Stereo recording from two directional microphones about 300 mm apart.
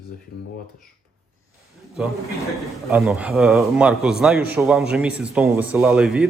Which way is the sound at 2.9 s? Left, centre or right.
Centre.